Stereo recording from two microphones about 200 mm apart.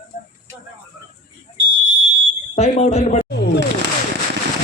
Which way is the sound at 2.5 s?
35° left (ahead or behind).